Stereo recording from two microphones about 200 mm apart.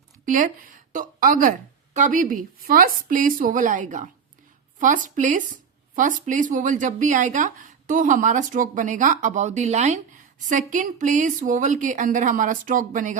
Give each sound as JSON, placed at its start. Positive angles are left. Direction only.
{"t": 0.3, "sound": "speech", "side_deg": -40}